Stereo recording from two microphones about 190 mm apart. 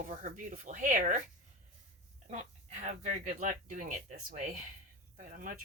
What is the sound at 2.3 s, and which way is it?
Speech, 40° right (ahead or behind).